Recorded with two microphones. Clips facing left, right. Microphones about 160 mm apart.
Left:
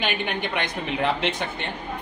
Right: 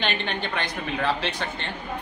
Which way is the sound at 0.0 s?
10° left (ahead or behind).